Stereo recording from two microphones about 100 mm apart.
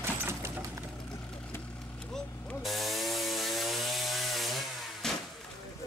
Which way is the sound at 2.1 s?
5° left (ahead or behind).